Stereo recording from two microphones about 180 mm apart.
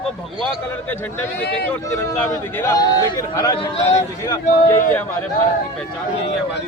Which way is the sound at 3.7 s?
35° left (ahead or behind).